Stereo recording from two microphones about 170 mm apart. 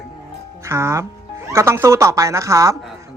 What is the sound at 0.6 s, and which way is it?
Speech, 15° right (ahead or behind).